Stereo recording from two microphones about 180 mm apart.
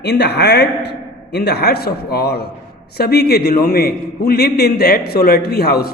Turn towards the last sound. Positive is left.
turn(degrees=60)  # may be behind; listen again after turning